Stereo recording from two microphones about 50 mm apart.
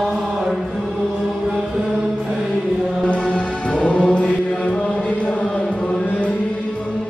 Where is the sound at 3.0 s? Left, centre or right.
Left.